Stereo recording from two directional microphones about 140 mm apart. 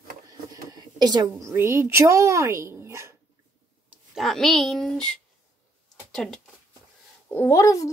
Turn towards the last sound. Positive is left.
turn(degrees=20)  # may be behind; listen again after turning